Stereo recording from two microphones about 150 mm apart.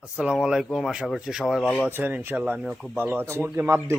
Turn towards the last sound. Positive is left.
turn(degrees=-15)  # may be behind; listen again after turning